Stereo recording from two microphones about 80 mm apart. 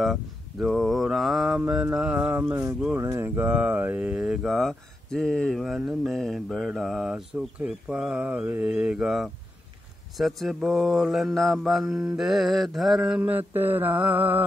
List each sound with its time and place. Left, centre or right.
0.0 s mantra: centre
2.0 s speech: centre
3.0 s speech: right
3.3 s speech: right
4.5 s mantra: centre
7.5 s speech: centre
10.1 s mantra: centre
13.3 s speech: right